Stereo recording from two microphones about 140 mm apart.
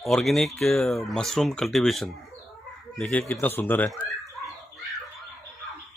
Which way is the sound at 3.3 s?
15° left (ahead or behind).